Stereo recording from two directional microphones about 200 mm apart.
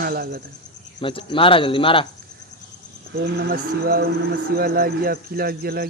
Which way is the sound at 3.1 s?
50° right (ahead or behind).